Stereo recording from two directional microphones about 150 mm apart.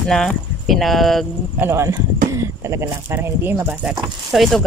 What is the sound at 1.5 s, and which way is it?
Speech, 20° right (ahead or behind).